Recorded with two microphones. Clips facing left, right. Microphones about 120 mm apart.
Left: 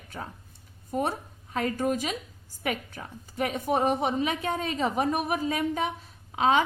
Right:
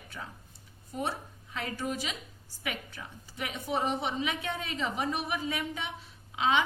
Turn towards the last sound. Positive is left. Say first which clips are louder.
# left 5 dB
turn(degrees=45)  # may be behind; listen again after turning